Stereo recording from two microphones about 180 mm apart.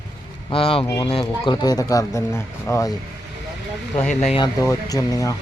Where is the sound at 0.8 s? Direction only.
20° left (ahead or behind).